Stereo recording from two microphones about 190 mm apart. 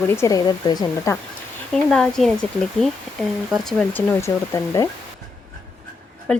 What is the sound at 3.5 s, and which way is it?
Speech, centre (ahead or behind).